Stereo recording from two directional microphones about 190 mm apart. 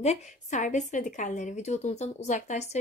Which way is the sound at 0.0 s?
35° left (ahead or behind).